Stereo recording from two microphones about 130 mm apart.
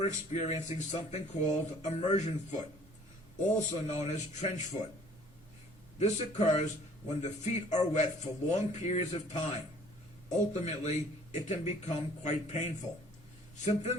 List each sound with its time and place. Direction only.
0.0 s speech: 60° left (ahead or behind)
3.6 s speech: 55° left (ahead or behind)
6.0 s speech: 65° left (ahead or behind)